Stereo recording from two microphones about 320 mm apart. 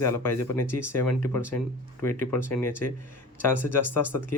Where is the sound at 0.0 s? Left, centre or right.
Centre.